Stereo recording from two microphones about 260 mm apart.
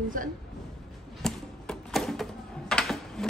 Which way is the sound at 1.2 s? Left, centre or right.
Centre.